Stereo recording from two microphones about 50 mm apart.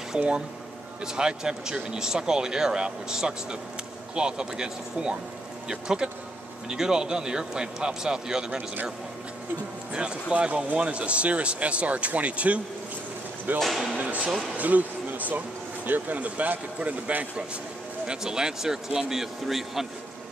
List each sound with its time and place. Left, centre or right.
0.1 s speech: centre
10.3 s speech: right
13.6 s speech: centre
13.9 s a sound: right
14.6 s speech: right
18.0 s speech: centre